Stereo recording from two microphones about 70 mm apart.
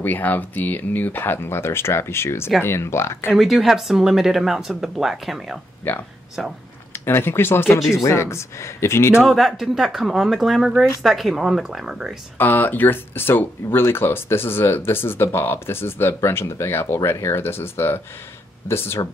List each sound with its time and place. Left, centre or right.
0.0 s speech: left
3.3 s speech: centre
6.9 s speech: left
9.2 s speech: centre
12.4 s speech: left